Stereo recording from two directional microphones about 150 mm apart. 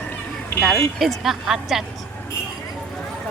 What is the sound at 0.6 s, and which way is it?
Speech, centre (ahead or behind).